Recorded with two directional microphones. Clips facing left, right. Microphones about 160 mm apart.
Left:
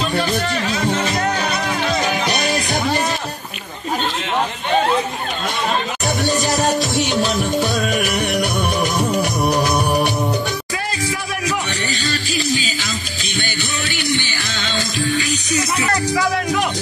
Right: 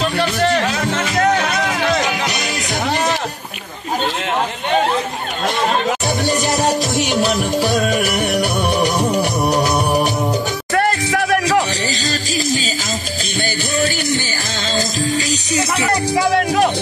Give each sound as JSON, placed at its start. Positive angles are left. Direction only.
{"t": 0.2, "sound": "music", "side_deg": -70}
{"t": 7.2, "sound": "music", "side_deg": -10}
{"t": 10.7, "sound": "music", "side_deg": -60}
{"t": 13.4, "sound": "music", "side_deg": -40}
{"t": 15.8, "sound": "music", "side_deg": -30}